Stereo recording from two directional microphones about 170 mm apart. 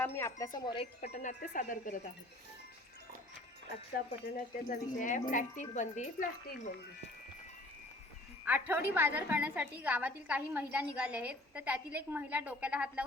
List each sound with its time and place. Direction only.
0.0 s speech: 15° left (ahead or behind); by 2.0 s 50° left (ahead or behind)
4.4 s speech: 50° left (ahead or behind)
8.4 s a woman's voice: 10° right (ahead or behind)